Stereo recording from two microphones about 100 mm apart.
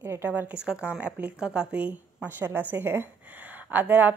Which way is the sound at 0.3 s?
15° right (ahead or behind).